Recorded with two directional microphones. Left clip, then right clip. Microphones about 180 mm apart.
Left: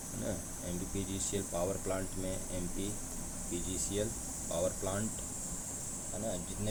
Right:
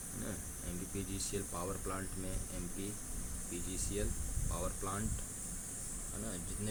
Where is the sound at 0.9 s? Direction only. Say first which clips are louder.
Left 3 dB; 5° right (ahead or behind).